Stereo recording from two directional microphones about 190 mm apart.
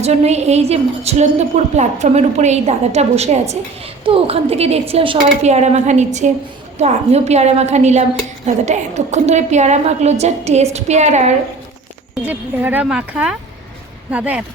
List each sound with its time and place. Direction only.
0.0 s a woman's voice: 35° right (ahead or behind)
12.2 s a woman's voice: 10° right (ahead or behind)